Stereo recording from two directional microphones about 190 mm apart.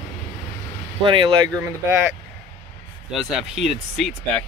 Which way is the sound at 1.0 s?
25° right (ahead or behind).